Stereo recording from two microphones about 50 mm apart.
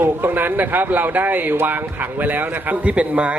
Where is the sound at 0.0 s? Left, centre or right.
Right.